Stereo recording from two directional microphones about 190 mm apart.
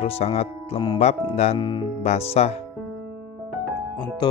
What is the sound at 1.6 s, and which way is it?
Speech, 25° left (ahead or behind).